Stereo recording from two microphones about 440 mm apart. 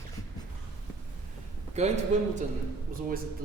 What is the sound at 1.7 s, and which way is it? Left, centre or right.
Speech, centre.